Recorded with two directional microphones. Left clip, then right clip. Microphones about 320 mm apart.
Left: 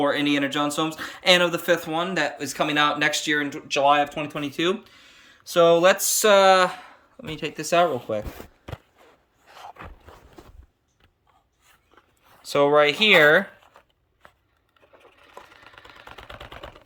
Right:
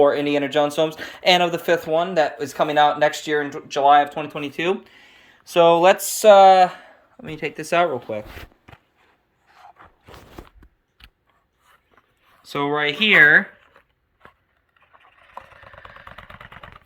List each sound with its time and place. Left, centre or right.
0.0 s speech: centre
9.5 s a sound: left
12.4 s speech: centre